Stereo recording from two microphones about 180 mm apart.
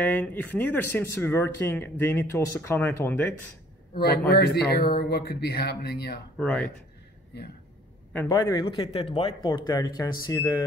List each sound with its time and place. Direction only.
0.0 s speech: 10° left (ahead or behind)
3.9 s a man's voice: 60° left (ahead or behind)
6.3 s speech: 5° left (ahead or behind)
8.1 s a man's voice: 10° left (ahead or behind)
8.4 s speech: 25° left (ahead or behind)